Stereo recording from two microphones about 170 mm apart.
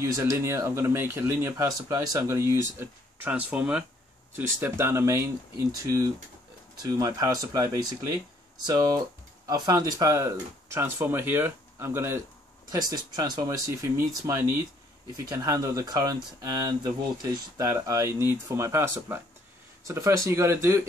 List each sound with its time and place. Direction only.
0.0 s speech: 15° right (ahead or behind)